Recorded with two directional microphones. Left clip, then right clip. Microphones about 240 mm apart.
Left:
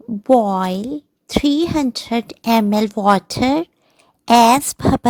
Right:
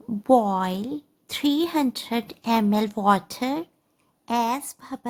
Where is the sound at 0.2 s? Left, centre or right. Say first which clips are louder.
Left 5 dB; left.